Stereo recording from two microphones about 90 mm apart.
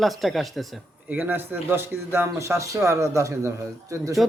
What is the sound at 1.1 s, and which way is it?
Speech, 20° right (ahead or behind).